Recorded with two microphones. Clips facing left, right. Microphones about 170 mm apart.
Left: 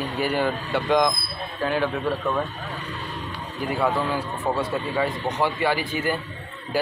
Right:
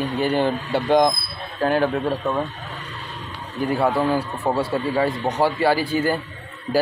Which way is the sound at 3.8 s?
30° right (ahead or behind).